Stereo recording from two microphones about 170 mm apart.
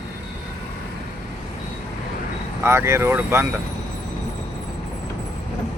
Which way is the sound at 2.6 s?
15° right (ahead or behind).